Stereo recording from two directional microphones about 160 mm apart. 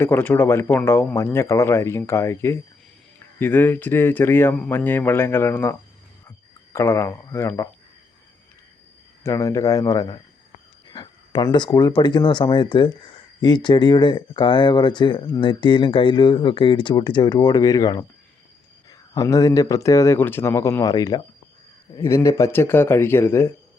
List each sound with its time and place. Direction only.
0.0 s speech: 10° left (ahead or behind)
6.7 s speech: 15° left (ahead or behind)
9.2 s speech: 20° left (ahead or behind)